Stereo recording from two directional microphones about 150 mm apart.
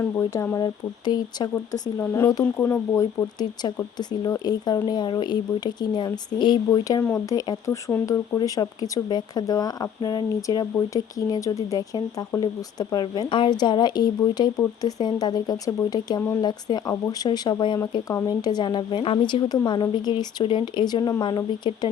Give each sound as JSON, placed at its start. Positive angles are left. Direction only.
{"t": 0.0, "sound": "speech", "side_deg": 15}